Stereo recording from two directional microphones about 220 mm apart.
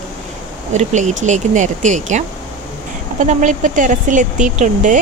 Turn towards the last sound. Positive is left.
turn(degrees=-35)  # may be behind; listen again after turning